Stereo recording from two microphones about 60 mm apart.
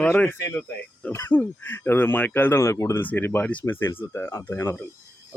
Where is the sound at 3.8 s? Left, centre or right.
Left.